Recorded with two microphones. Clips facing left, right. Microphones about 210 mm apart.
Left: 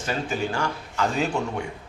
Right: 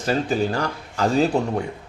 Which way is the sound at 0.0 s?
35° right (ahead or behind).